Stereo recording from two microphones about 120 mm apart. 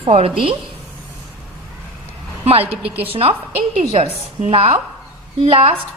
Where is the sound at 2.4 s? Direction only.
55° right (ahead or behind).